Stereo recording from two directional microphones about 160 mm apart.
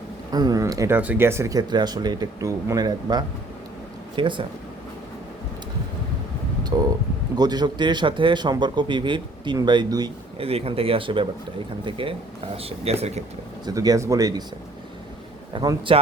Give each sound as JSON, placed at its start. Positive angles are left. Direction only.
{"t": 0.3, "sound": "a man's voice", "side_deg": -25}
{"t": 6.7, "sound": "a man's voice", "side_deg": -25}
{"t": 13.7, "sound": "a man's voice", "side_deg": -25}
{"t": 15.5, "sound": "speech", "side_deg": -30}